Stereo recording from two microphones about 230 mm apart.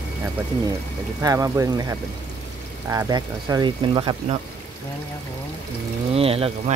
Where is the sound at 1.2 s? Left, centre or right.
Centre.